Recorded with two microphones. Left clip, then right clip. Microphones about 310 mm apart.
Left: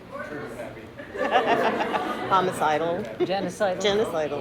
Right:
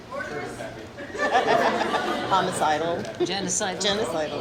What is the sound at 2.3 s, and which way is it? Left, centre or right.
Speech, left.